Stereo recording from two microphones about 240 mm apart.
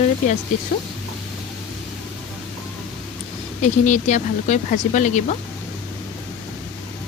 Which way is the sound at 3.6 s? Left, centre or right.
Left.